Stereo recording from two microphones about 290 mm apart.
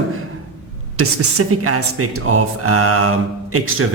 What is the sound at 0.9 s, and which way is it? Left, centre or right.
Speech, right.